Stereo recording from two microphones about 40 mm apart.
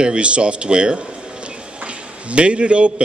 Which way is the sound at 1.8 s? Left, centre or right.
Right.